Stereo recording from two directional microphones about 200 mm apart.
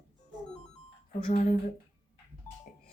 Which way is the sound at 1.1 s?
45° left (ahead or behind).